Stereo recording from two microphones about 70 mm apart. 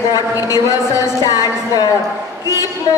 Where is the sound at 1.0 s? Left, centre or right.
Left.